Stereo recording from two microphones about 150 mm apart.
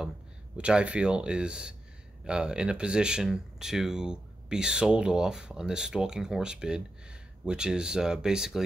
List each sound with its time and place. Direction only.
0.6 s speech: 5° right (ahead or behind)